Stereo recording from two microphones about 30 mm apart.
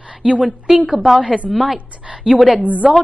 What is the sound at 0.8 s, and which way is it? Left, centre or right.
Speech, right.